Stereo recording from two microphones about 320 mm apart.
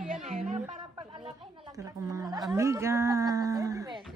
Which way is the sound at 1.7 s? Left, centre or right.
Centre.